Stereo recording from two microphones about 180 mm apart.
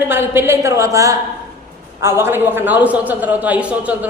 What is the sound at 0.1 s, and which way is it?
A man's voice, 10° right (ahead or behind).